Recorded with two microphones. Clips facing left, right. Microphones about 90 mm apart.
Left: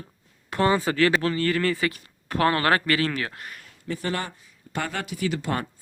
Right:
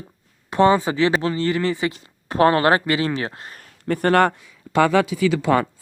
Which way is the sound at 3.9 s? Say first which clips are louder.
Right 12 dB; 55° right (ahead or behind).